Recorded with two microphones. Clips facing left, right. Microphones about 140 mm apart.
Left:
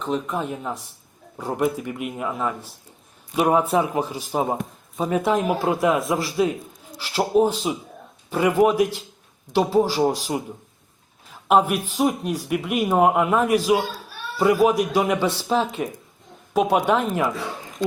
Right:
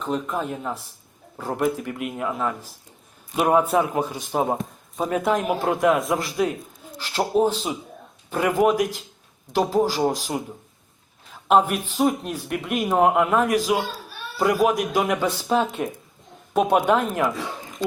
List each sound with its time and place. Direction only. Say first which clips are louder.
0.3 s speech: even; 5° left (ahead or behind)